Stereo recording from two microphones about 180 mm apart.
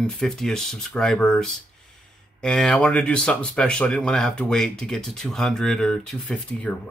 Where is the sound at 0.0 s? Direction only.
5° left (ahead or behind).